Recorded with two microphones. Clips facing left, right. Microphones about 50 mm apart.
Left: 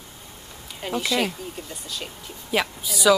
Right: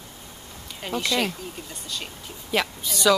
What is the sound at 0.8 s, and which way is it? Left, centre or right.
Speech, centre.